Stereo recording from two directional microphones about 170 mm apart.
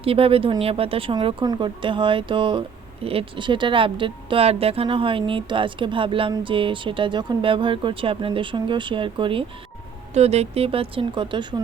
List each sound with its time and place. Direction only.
0.0 s speech: 35° right (ahead or behind)